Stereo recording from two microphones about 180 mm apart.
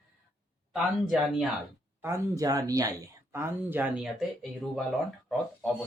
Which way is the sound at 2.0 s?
15° right (ahead or behind).